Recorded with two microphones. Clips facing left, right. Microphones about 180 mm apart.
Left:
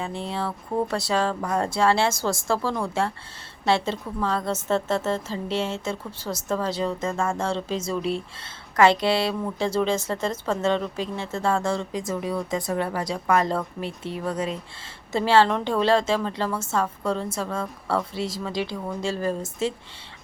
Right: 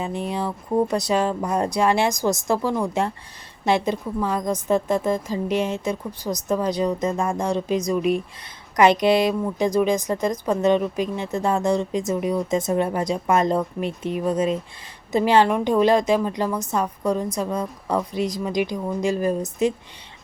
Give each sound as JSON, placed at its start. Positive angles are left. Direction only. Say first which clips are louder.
{"t": 0.0, "sound": "a woman's voice", "louder": "right 3 dB", "side_deg": -15}